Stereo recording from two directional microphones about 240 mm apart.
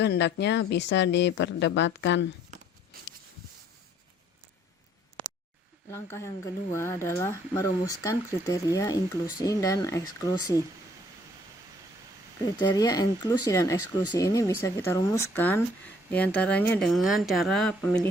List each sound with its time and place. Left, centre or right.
0.0 s speech: left
5.9 s speech: centre
12.5 s speech: centre
13.7 s speech: left
14.1 s speech: centre